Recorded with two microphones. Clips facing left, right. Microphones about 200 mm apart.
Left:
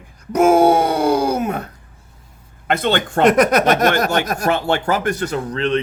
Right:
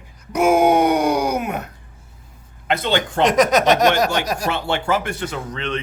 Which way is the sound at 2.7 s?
50° left (ahead or behind).